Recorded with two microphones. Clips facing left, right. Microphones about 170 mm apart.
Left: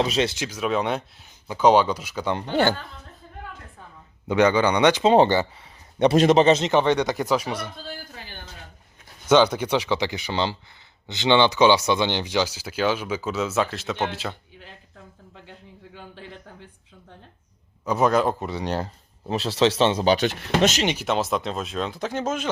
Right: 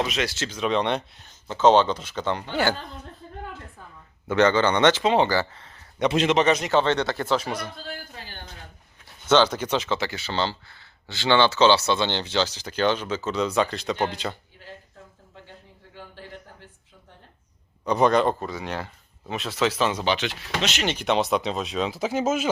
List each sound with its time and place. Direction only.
0.0 s speech: 30° left (ahead or behind)
0.3 s speech: 10° left (ahead or behind)
4.3 s speech: 10° left (ahead or behind)
5.0 s speech: 35° left (ahead or behind)
5.5 s a sound: 10° left (ahead or behind)
6.0 s speech: 40° left (ahead or behind); by 7.6 s 10° left (ahead or behind)
9.3 s speech: 10° left (ahead or behind)
17.8 s speech: 5° left (ahead or behind)
18.3 s speech: 25° left (ahead or behind)
18.6 s speech: 35° left (ahead or behind)
20.8 s speech: 5° left (ahead or behind)